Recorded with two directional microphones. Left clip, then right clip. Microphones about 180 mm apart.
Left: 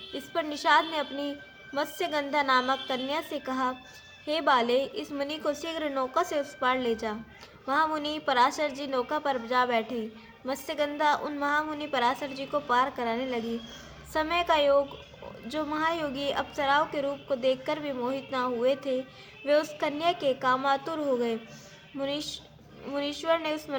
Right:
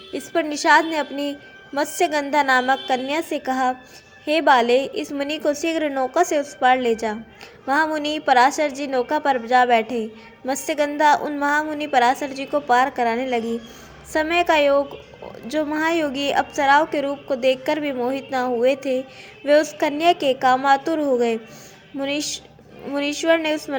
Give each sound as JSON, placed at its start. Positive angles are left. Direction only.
{"t": 0.1, "sound": "a woman's voice", "side_deg": -20}